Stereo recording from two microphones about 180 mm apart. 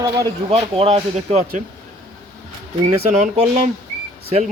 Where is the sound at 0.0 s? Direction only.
25° right (ahead or behind).